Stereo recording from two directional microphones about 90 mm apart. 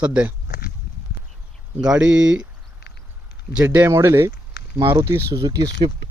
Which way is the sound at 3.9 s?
30° right (ahead or behind).